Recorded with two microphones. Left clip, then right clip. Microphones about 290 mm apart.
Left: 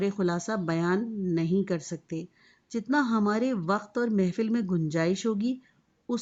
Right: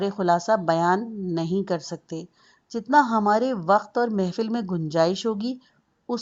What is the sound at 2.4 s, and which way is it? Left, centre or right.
Speech, centre.